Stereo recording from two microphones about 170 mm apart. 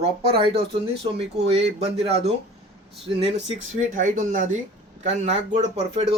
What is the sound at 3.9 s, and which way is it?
Speech, 50° right (ahead or behind).